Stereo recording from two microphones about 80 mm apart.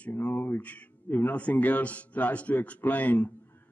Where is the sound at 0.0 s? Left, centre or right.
Centre.